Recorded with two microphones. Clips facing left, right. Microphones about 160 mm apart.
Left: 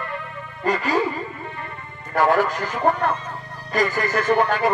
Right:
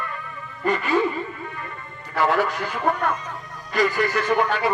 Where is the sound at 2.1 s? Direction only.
50° left (ahead or behind).